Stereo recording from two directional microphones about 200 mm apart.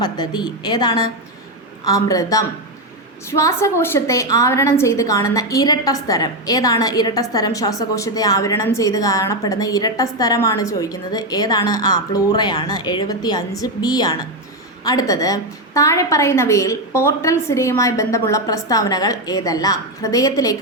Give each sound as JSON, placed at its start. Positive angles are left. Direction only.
{"t": 0.0, "sound": "a woman's voice", "side_deg": 20}